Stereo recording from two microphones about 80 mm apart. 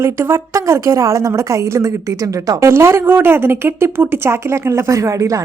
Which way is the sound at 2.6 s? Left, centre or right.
Right.